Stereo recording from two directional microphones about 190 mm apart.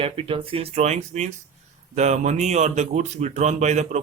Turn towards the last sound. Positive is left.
turn(degrees=-35)  # may be behind; listen again after turning